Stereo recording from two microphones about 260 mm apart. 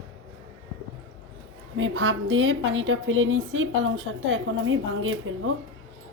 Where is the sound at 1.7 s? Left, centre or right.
Right.